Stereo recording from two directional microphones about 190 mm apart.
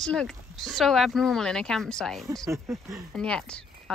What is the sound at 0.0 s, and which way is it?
Speech, 5° left (ahead or behind).